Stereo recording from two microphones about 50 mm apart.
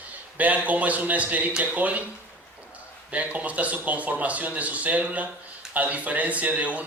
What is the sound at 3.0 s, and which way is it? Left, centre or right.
Speech, right.